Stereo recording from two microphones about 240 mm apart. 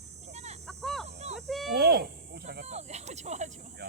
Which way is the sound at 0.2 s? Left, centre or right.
Right.